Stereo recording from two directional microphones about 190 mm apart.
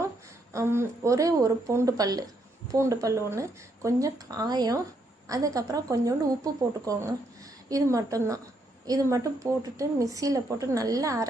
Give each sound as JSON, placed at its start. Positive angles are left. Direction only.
{"t": 0.5, "sound": "a woman's voice", "side_deg": -15}